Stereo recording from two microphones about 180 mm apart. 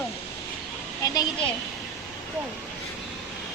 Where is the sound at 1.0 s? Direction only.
20° left (ahead or behind).